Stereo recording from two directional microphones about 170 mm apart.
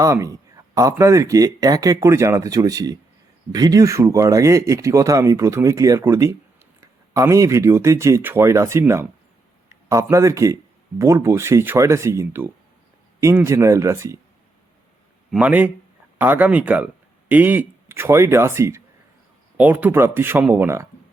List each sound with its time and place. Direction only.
0.0 s speech: 20° right (ahead or behind)
15.3 s speech: 10° right (ahead or behind)